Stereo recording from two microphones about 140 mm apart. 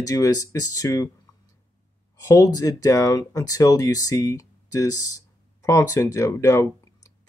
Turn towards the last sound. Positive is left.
turn(degrees=25)  # may be behind; listen again after turning